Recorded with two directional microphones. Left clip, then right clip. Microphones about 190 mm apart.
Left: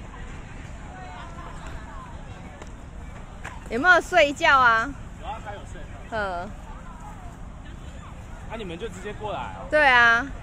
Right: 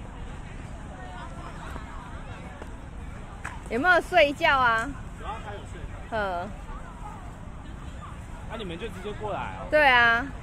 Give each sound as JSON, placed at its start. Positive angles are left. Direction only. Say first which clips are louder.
{"t": 3.7, "sound": "a woman's voice", "louder": "left 3 dB", "side_deg": 10}
{"t": 6.0, "sound": "speech", "louder": "even", "side_deg": 0}
{"t": 8.5, "sound": "speech", "louder": "left 2 dB", "side_deg": 30}
{"t": 9.2, "sound": "a woman's voice", "louder": "left 1 dB", "side_deg": 15}
{"t": 9.7, "sound": "speech", "louder": "left 2 dB", "side_deg": 5}